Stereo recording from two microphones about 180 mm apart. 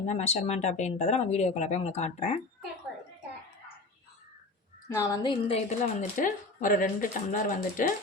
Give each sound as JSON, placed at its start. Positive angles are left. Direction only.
{"t": 0.0, "sound": "speech", "side_deg": 40}
{"t": 4.9, "sound": "a woman's voice", "side_deg": 15}
{"t": 5.2, "sound": "speech", "side_deg": 30}